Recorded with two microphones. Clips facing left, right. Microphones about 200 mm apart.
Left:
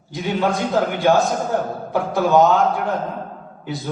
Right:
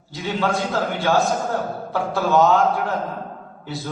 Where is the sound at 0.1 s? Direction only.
15° left (ahead or behind).